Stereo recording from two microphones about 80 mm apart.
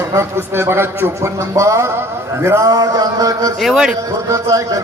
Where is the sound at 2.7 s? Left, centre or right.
Right.